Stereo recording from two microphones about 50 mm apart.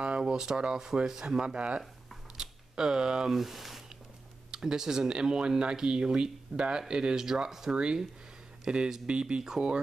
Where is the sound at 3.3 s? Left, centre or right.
Centre.